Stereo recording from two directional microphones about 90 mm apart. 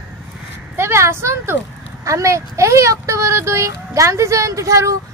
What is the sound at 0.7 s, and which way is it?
Speech, 30° right (ahead or behind).